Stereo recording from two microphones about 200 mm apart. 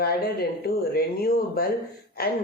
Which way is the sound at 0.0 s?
50° left (ahead or behind).